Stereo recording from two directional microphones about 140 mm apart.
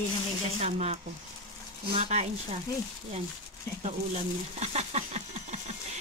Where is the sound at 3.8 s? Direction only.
45° right (ahead or behind).